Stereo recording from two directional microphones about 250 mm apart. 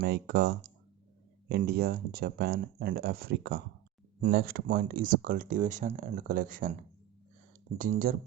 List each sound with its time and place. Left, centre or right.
0.0 s speech: right
7.8 s speech: right